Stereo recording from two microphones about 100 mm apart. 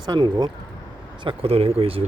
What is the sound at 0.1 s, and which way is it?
Speech, 45° right (ahead or behind).